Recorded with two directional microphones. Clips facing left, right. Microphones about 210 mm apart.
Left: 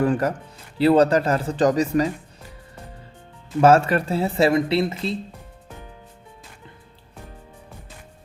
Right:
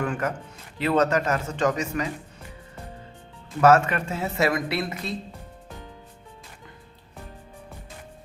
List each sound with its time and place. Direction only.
0.0 s speech: 35° left (ahead or behind)
3.6 s speech: 30° left (ahead or behind)